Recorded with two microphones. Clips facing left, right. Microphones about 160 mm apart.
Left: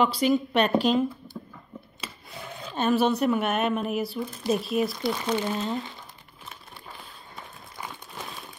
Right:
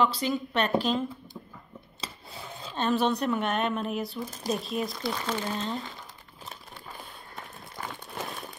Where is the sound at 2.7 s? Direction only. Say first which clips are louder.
Left 3 dB; 5° left (ahead or behind).